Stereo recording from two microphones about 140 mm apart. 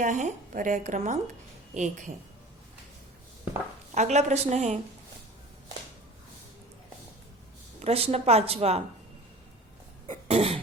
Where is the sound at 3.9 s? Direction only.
55° right (ahead or behind).